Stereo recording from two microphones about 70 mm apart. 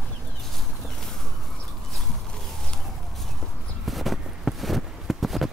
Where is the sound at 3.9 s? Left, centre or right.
Centre.